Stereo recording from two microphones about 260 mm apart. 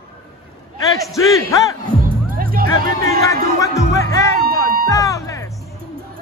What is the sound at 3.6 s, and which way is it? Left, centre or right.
Music, centre.